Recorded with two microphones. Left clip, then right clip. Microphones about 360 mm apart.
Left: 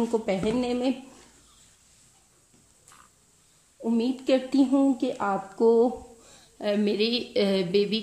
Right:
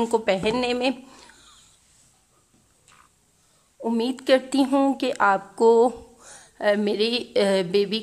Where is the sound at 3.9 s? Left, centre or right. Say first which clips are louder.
Right 4 dB; centre.